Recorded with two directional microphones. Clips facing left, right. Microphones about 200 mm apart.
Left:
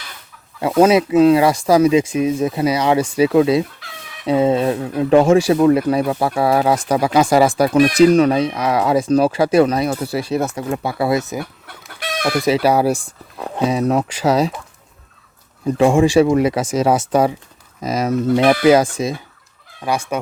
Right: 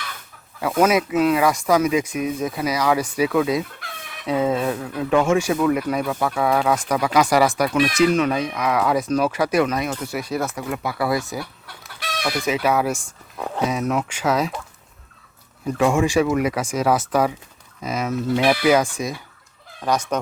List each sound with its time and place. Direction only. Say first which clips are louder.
0.8 s speech: left 6 dB; 30° left (ahead or behind)
7.8 s speech: left 7 dB; 40° left (ahead or behind); by 11.4 s 20° left (ahead or behind)
11.9 s chicken: left 6 dB; 55° left (ahead or behind)
12.4 s speech: left 6 dB; 35° left (ahead or behind)
15.6 s speech: left 5 dB; 30° left (ahead or behind)
17.8 s speech: left 6 dB; 40° left (ahead or behind)
18.6 s speech: left 5 dB; 30° left (ahead or behind)
19.8 s fowl: left 1 dB; 10° left (ahead or behind)